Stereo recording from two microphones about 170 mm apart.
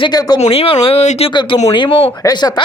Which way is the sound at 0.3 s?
35° left (ahead or behind).